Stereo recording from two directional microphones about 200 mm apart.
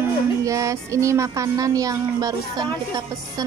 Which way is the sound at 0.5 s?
15° right (ahead or behind).